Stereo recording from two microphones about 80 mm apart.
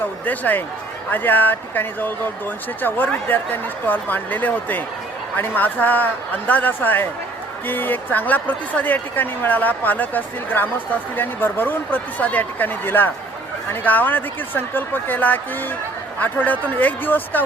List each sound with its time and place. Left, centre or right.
0.3 s speech: left